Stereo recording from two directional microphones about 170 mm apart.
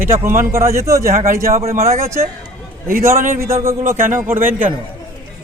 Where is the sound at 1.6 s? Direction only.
40° right (ahead or behind).